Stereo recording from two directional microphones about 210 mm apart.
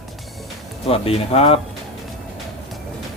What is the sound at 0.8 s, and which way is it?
Speech, 25° left (ahead or behind).